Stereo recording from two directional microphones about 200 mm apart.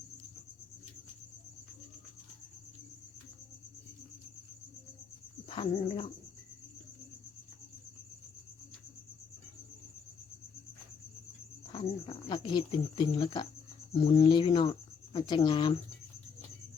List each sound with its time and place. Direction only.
5.5 s bird: 25° left (ahead or behind)
11.7 s speech: 25° left (ahead or behind)